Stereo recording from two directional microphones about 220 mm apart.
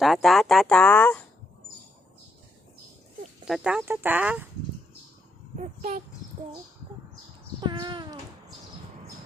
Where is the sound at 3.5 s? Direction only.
5° right (ahead or behind).